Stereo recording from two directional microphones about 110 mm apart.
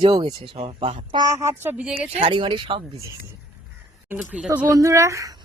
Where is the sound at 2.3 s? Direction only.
45° right (ahead or behind).